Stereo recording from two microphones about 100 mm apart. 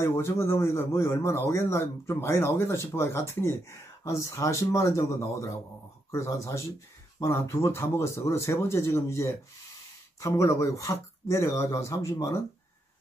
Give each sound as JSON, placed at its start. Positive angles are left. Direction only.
{"t": 0.0, "sound": "a man's voice", "side_deg": 30}